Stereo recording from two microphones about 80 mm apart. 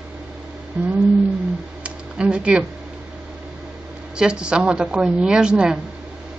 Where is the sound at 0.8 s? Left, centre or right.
Centre.